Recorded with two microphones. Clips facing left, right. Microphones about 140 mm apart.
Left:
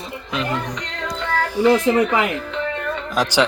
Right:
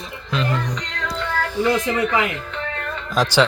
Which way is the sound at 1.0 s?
15° left (ahead or behind).